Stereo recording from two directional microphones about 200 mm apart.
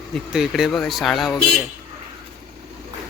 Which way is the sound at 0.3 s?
Centre (ahead or behind).